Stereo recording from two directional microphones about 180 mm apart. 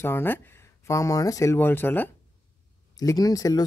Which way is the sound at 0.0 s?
10° left (ahead or behind).